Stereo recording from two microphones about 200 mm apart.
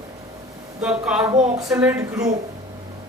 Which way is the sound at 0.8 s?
5° right (ahead or behind).